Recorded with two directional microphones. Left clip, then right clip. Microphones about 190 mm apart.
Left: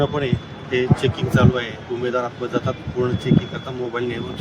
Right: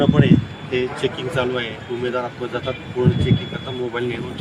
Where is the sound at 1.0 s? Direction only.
15° right (ahead or behind).